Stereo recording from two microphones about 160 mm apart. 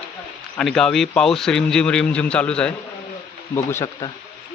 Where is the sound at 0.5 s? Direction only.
5° left (ahead or behind).